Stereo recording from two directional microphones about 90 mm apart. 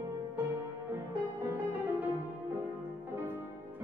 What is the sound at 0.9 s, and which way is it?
Music, 25° right (ahead or behind).